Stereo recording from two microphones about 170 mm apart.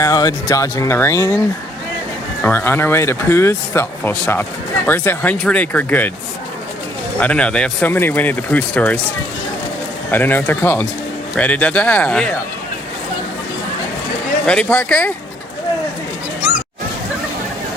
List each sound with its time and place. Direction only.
0.0 s speech: 20° left (ahead or behind)
2.4 s speech: 10° left (ahead or behind)
7.2 s speech: 5° left (ahead or behind)
10.1 s speech: 10° left (ahead or behind)
14.4 s speech: 5° left (ahead or behind)